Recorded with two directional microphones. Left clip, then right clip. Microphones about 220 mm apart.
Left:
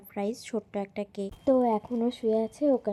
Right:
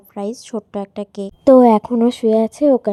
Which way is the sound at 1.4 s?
35° right (ahead or behind).